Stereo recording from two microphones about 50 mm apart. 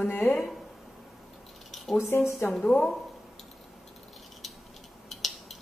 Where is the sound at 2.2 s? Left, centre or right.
Left.